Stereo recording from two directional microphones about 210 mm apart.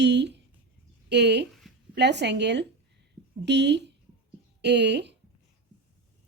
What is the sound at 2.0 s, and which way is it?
A woman's voice, 55° right (ahead or behind).